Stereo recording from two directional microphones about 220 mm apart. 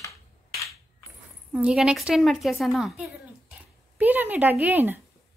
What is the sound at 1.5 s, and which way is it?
A woman's voice, centre (ahead or behind).